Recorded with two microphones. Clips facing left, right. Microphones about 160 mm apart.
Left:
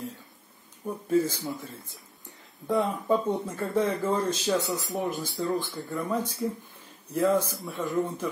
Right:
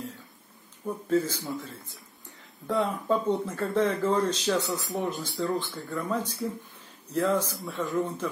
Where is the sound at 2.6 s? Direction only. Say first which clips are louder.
Left 1 dB; 15° left (ahead or behind).